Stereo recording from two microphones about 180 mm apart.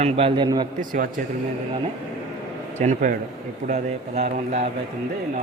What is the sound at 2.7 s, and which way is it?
Speech, 40° right (ahead or behind).